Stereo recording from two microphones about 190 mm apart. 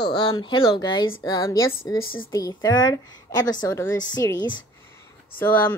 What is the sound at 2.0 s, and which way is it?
Speech, 90° left.